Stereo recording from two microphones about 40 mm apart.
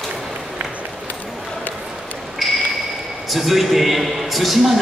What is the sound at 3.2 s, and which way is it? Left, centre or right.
A man's voice, centre.